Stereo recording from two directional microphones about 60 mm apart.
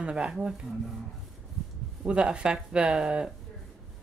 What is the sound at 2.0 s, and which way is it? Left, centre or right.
Speech, centre.